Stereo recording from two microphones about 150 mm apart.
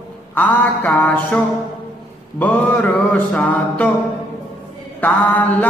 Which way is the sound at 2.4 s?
10° left (ahead or behind).